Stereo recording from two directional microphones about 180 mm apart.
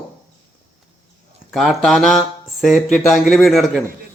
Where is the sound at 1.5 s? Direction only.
Centre (ahead or behind).